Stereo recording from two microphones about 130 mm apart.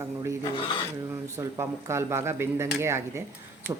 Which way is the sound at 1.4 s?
20° right (ahead or behind).